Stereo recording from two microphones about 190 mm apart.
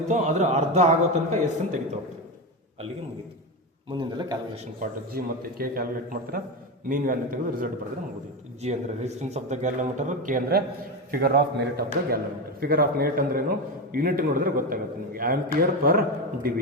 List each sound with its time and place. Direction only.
0.1 s speech: 40° right (ahead or behind)
3.9 s a man's voice: 20° right (ahead or behind)
4.5 s speech: 35° right (ahead or behind)
5.1 s a man's voice: 50° right (ahead or behind)
8.6 s speech: 35° right (ahead or behind)
11.1 s a man's voice: 55° right (ahead or behind)